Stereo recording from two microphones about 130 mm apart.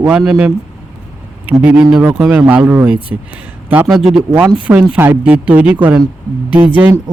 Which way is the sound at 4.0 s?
5° right (ahead or behind).